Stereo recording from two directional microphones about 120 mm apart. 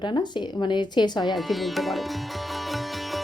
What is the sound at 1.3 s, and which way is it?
Speech, centre (ahead or behind).